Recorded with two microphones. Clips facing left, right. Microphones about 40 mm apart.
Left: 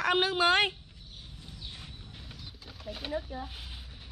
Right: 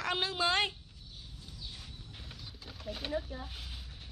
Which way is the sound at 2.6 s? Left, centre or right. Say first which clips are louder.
Even; centre.